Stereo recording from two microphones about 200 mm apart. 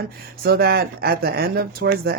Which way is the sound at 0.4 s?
50° right (ahead or behind).